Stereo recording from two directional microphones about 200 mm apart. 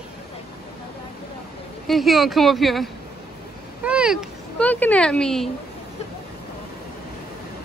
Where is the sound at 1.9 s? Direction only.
Centre (ahead or behind).